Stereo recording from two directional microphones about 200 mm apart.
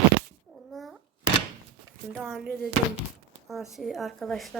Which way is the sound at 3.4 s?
Centre (ahead or behind).